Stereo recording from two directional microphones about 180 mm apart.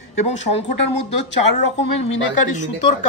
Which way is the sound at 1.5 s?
35° left (ahead or behind).